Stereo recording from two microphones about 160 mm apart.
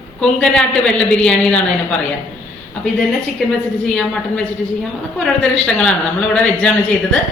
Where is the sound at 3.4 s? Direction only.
5° left (ahead or behind).